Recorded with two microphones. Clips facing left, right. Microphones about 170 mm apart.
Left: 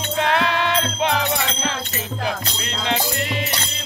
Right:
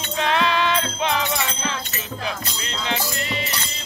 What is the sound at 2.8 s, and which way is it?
Music, 60° left (ahead or behind).